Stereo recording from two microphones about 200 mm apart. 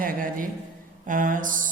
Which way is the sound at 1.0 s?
40° right (ahead or behind).